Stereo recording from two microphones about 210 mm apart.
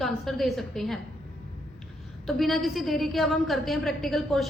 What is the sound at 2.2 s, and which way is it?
A woman's voice, centre (ahead or behind).